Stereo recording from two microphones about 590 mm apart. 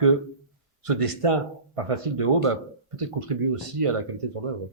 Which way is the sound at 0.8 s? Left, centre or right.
Right.